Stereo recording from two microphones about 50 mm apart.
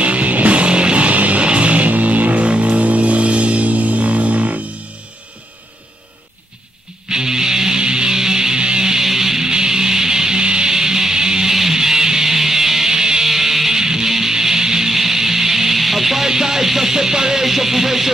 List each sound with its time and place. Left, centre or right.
0.0 s music: right
7.1 s music: centre